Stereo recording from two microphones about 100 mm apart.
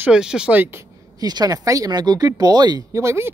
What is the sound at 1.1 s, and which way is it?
Speech, 40° right (ahead or behind).